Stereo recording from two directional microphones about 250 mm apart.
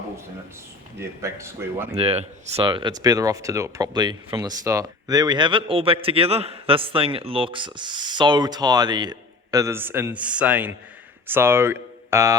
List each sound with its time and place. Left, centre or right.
0.9 s speech: centre
1.9 s speech: right